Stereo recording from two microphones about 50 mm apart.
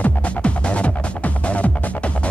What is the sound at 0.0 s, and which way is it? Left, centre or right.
Music, left.